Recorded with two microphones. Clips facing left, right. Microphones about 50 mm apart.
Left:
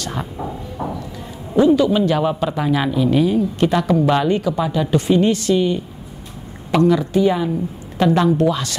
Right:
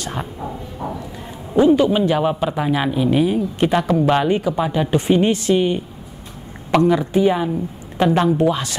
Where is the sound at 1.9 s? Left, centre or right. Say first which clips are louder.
Even; centre.